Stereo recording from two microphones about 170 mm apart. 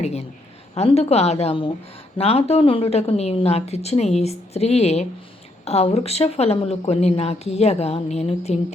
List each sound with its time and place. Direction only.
0.0 s a woman's voice: 40° left (ahead or behind)